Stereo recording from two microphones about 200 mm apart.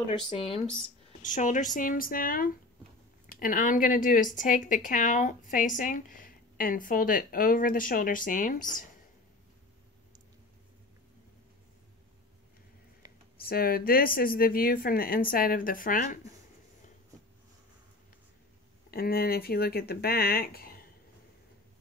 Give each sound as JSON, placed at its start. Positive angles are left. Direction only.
{"t": 0.4, "sound": "speech", "side_deg": 30}
{"t": 1.2, "sound": "speech", "side_deg": 40}
{"t": 13.4, "sound": "speech", "side_deg": 45}
{"t": 18.9, "sound": "speech", "side_deg": 50}